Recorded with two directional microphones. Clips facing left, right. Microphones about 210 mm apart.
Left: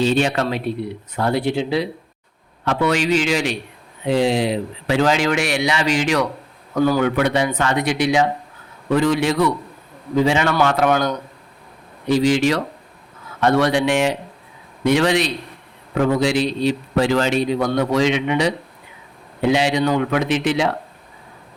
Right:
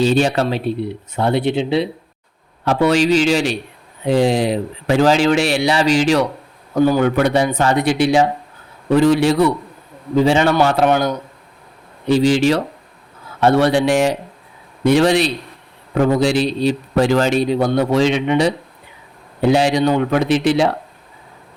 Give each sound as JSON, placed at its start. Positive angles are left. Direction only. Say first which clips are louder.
{"t": 0.0, "sound": "speech", "louder": "right 3 dB", "side_deg": -40}
{"t": 2.6, "sound": "speech", "louder": "right 4 dB", "side_deg": -35}
{"t": 6.7, "sound": "speech", "louder": "right 3 dB", "side_deg": -20}
{"t": 7.0, "sound": "speech", "louder": "right 3 dB", "side_deg": -40}
{"t": 12.0, "sound": "speech", "louder": "right 3 dB", "side_deg": -30}